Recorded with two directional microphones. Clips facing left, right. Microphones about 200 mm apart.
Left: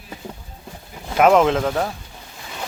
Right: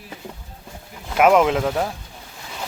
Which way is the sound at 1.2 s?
5° right (ahead or behind).